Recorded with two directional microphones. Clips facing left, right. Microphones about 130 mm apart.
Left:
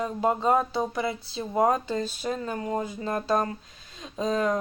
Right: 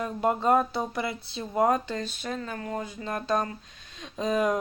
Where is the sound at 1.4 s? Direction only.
15° left (ahead or behind).